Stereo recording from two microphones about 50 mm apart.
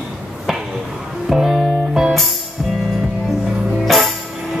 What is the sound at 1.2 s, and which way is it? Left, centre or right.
Music, centre.